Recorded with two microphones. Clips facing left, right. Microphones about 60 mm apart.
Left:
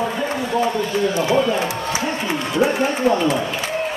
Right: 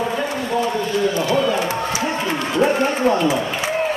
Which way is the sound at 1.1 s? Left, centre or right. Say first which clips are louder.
Left 1 dB; left.